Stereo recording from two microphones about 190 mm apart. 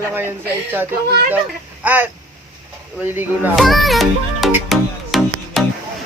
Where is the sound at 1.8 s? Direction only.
10° right (ahead or behind).